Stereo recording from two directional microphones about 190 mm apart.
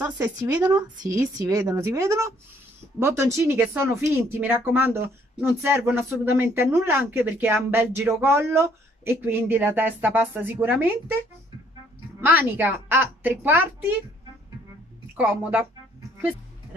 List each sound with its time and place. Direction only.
0.0 s speech: 20° right (ahead or behind)
12.2 s speech: 10° right (ahead or behind)
15.1 s speech: 10° right (ahead or behind)